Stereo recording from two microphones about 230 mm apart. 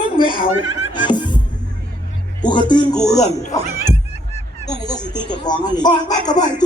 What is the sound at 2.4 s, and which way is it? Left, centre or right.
Speech, centre.